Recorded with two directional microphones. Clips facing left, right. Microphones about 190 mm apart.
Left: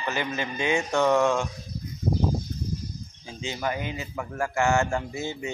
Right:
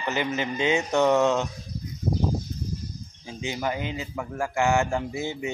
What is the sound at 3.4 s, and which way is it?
Speech, 15° right (ahead or behind).